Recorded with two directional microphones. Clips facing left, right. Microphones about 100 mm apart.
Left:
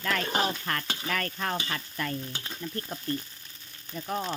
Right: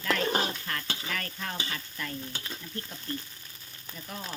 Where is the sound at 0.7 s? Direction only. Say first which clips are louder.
Left 4 dB; 55° left (ahead or behind).